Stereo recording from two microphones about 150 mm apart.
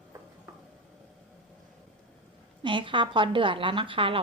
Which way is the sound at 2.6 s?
35° right (ahead or behind).